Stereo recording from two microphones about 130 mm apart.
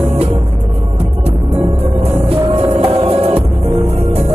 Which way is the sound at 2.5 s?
50° right (ahead or behind).